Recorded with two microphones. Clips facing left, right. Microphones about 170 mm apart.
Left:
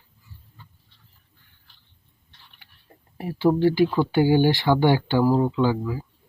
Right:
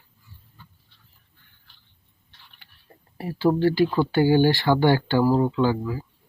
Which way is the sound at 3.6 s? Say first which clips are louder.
Left 1 dB; 20° left (ahead or behind).